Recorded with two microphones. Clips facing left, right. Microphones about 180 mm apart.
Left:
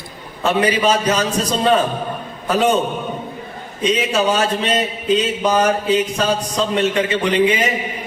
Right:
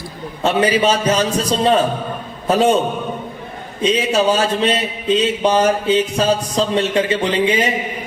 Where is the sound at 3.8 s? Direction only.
30° right (ahead or behind).